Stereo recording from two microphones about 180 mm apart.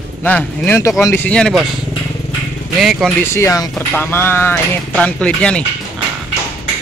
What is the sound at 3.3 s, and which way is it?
Speech, 15° left (ahead or behind).